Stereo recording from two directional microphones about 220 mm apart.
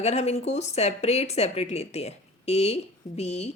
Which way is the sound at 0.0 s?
30° left (ahead or behind).